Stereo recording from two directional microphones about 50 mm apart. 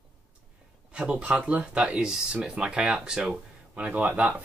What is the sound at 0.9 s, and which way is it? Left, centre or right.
Speech, right.